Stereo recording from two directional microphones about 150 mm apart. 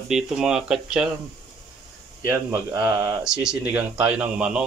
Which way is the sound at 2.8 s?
15° right (ahead or behind).